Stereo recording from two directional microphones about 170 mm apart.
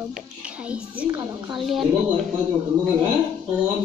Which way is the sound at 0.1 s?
5° right (ahead or behind).